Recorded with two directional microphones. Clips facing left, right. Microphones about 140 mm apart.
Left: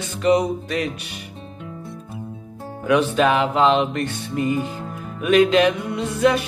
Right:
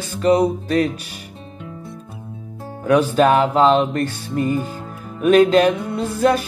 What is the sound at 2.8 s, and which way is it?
Music, 40° right (ahead or behind).